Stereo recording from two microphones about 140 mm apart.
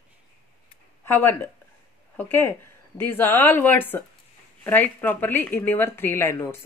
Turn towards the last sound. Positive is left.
turn(degrees=15)  # may be behind; listen again after turning